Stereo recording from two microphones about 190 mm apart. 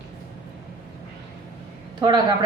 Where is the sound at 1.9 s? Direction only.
20° right (ahead or behind).